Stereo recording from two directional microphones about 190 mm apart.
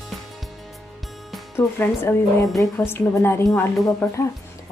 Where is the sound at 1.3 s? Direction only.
10° left (ahead or behind).